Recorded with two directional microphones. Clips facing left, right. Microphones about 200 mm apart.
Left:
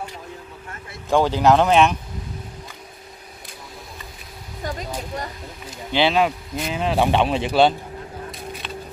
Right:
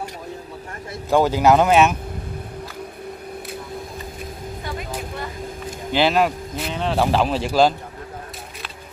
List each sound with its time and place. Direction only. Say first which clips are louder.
1.1 s speech: right 1 dB; 10° right (ahead or behind)
4.6 s vehicle: left 2 dB; 40° left (ahead or behind)
5.9 s speech: right 1 dB; 5° right (ahead or behind)